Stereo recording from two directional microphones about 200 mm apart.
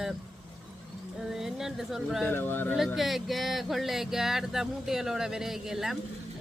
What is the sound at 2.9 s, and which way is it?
Speech, centre (ahead or behind).